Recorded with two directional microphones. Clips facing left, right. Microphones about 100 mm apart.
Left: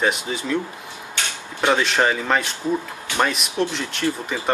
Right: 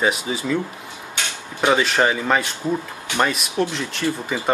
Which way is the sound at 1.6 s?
Centre (ahead or behind).